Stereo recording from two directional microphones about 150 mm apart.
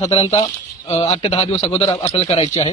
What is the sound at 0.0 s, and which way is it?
Speech, 40° left (ahead or behind).